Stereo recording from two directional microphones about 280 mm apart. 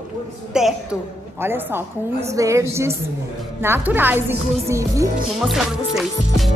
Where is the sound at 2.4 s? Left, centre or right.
Centre.